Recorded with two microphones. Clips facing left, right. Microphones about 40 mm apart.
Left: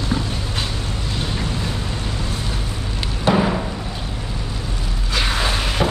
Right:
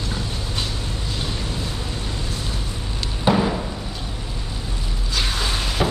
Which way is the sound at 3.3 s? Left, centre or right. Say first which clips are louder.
Left 1 dB; centre.